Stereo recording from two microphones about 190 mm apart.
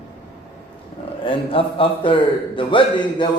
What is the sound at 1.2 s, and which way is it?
A man's voice, 30° left (ahead or behind).